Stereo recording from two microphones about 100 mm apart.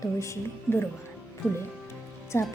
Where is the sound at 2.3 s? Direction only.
25° left (ahead or behind).